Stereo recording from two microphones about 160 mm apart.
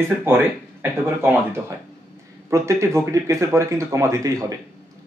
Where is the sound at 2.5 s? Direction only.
20° right (ahead or behind).